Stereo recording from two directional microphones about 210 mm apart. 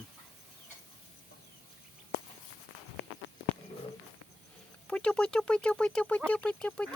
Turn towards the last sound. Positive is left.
turn(degrees=5)  # may be behind; listen again after turning